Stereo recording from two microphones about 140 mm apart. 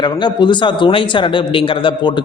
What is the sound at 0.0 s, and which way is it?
A man's voice, 35° left (ahead or behind).